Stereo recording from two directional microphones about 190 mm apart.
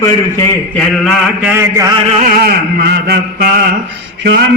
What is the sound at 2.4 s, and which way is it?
A man's voice, 60° right (ahead or behind).